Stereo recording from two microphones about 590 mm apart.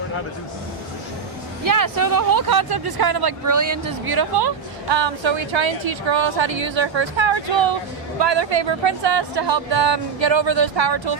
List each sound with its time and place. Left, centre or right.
1.6 s speech: right